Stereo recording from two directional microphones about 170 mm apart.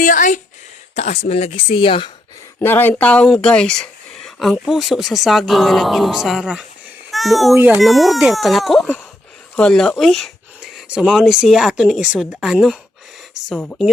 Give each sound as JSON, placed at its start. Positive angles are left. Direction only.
{"t": 0.0, "sound": "speech", "side_deg": 50}
{"t": 2.6, "sound": "a child's voice", "side_deg": 10}
{"t": 7.5, "sound": "a child's voice", "side_deg": -10}
{"t": 7.8, "sound": "speech", "side_deg": 0}